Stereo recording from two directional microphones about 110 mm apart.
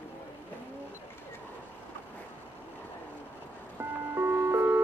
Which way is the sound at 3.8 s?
20° right (ahead or behind).